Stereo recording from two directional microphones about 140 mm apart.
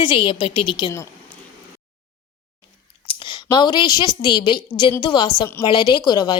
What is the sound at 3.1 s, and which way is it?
A woman's voice, 35° left (ahead or behind).